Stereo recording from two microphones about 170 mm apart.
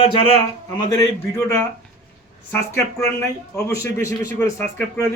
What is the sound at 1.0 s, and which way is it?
A man's voice, 15° left (ahead or behind).